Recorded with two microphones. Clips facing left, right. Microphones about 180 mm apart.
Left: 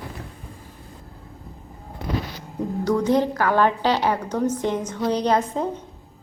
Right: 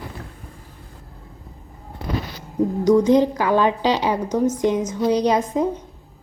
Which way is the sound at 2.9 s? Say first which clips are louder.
Right 5 dB; 15° right (ahead or behind).